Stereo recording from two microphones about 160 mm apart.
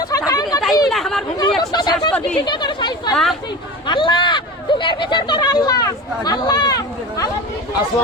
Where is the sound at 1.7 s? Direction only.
25° left (ahead or behind).